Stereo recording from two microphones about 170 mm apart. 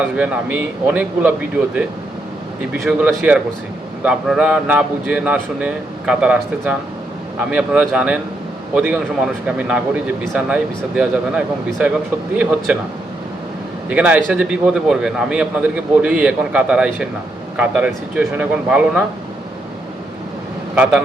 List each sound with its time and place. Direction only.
0.0 s a man's voice: 10° right (ahead or behind)
13.9 s a man's voice: 10° right (ahead or behind)